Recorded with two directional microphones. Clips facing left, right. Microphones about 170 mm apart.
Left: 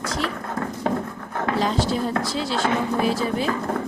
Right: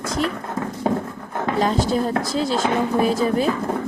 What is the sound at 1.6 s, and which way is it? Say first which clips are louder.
A woman's voice: right 4 dB; 45° right (ahead or behind).